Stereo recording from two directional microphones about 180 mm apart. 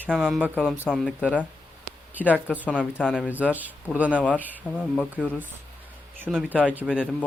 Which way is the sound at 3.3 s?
10° right (ahead or behind).